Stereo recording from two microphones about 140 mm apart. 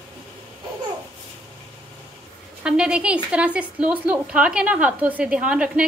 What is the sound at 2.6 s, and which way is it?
A woman's voice, 5° right (ahead or behind).